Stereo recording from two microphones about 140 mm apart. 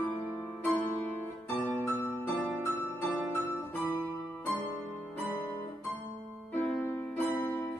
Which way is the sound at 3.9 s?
10° left (ahead or behind).